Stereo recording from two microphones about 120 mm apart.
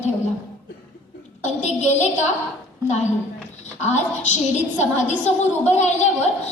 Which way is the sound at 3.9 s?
75° left (ahead or behind).